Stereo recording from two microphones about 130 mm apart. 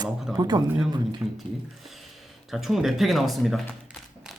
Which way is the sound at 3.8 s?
5° right (ahead or behind).